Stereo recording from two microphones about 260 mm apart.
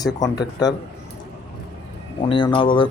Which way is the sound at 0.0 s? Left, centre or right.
Centre.